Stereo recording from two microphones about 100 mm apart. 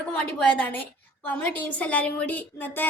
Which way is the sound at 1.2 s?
15° left (ahead or behind).